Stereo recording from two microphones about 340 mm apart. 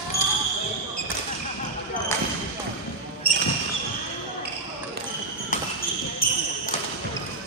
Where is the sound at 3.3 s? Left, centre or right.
Left.